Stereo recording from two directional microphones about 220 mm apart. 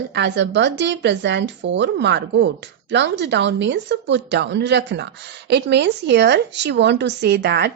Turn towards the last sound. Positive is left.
turn(degrees=-50)  # may be behind; listen again after turning